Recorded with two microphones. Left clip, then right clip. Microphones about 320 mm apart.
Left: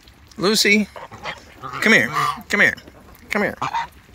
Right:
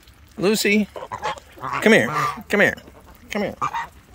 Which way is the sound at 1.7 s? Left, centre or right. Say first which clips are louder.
Even; centre.